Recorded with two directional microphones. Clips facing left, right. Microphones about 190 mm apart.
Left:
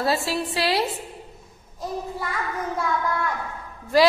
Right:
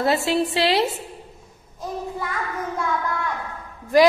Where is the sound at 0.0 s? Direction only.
20° right (ahead or behind).